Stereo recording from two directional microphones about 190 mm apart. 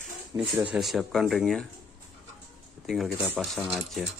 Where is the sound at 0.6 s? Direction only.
5° right (ahead or behind).